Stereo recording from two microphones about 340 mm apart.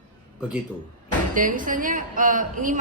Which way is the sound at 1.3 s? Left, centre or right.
Right.